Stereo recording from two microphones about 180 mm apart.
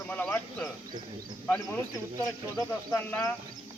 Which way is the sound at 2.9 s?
10° left (ahead or behind).